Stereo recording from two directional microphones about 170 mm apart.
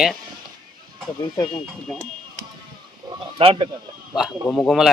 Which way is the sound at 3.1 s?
30° right (ahead or behind).